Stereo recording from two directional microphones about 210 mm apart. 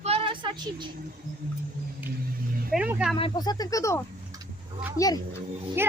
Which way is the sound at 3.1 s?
20° left (ahead or behind).